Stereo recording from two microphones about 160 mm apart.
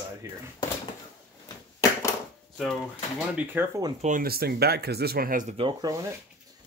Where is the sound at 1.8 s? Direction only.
20° left (ahead or behind).